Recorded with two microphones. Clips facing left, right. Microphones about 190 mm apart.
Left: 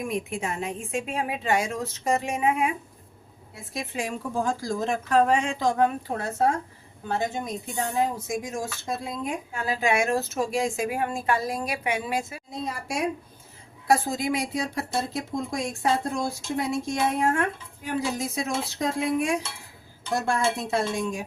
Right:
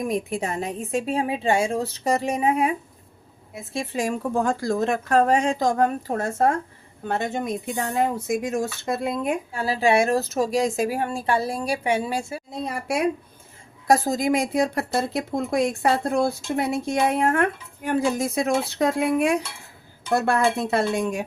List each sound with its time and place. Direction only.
0.0 s a woman's voice: 40° right (ahead or behind)
3.5 s a woman's voice: 25° right (ahead or behind)
4.4 s speech: 60° right (ahead or behind)
7.1 s speech: 60° right (ahead or behind)
9.5 s a woman's voice: 35° right (ahead or behind)
12.7 s speech: 65° right (ahead or behind)
13.8 s speech: 40° right (ahead or behind); by 21.2 s 65° right (ahead or behind)